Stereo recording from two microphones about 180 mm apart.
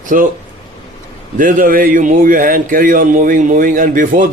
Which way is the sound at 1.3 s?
50° right (ahead or behind).